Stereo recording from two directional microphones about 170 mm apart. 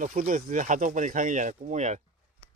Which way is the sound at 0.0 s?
50° right (ahead or behind).